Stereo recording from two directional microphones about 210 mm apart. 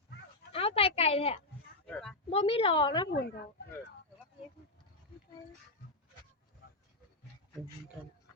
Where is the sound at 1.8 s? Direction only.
5° left (ahead or behind).